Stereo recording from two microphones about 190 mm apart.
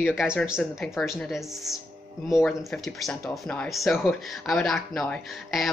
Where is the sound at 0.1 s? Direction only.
5° right (ahead or behind).